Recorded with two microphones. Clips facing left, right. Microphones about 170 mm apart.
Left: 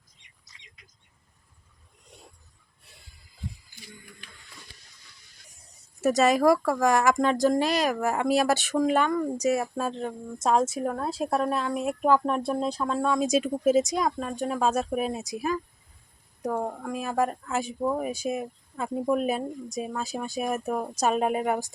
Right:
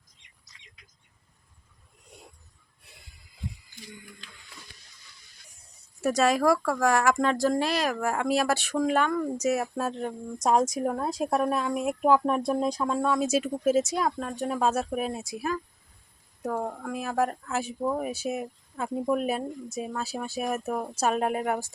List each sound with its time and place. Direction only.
6.0 s speech: centre (ahead or behind)
15.2 s speech: 20° left (ahead or behind)
16.4 s speech: centre (ahead or behind)
20.0 s speech: 15° left (ahead or behind)
20.4 s speech: centre (ahead or behind)
20.8 s speech: 15° left (ahead or behind)
21.1 s speech: 5° left (ahead or behind)